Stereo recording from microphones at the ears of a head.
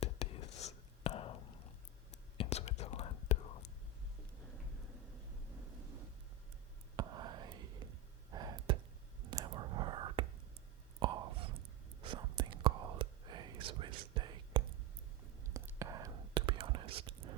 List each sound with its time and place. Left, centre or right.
0.0 s whispering: left
5.5 s vehicle: right
6.9 s whispering: right